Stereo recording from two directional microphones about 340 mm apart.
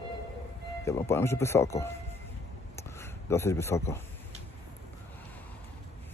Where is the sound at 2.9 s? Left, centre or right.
Centre.